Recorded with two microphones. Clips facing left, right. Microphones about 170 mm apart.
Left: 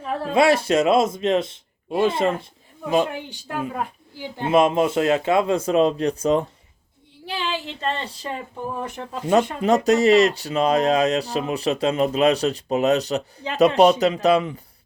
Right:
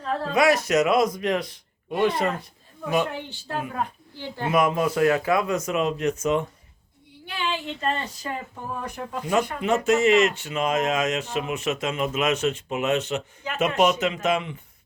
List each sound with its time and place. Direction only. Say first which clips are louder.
0.0 s a sound: left 1 dB; 15° left (ahead or behind)
0.3 s speech: left 3 dB; 30° left (ahead or behind)
4.4 s speech: left 4 dB; 25° left (ahead or behind)